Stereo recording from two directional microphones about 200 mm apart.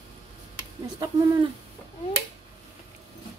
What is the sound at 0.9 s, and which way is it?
Speech, 20° right (ahead or behind).